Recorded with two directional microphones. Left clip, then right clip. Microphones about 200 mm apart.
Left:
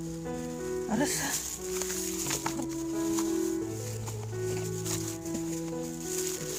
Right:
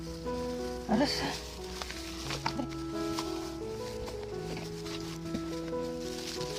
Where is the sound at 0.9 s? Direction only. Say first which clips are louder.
Right 3 dB; centre (ahead or behind).